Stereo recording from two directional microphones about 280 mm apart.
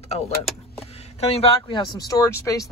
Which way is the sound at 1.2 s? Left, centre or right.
Left.